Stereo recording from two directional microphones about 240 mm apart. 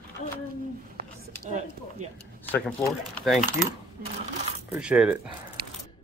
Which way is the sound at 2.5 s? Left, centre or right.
Centre.